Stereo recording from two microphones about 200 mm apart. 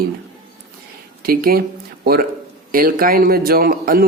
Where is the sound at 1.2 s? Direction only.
50° right (ahead or behind).